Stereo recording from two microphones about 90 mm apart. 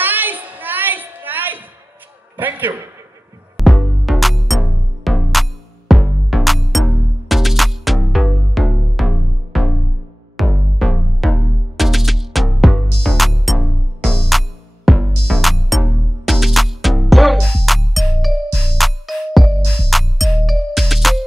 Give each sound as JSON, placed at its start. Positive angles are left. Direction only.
{"t": 0.0, "sound": "a sound", "side_deg": -20}
{"t": 2.3, "sound": "a man's voice", "side_deg": -20}
{"t": 3.5, "sound": "music", "side_deg": 0}